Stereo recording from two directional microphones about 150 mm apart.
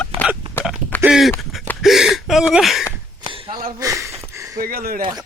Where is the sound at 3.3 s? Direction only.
40° right (ahead or behind).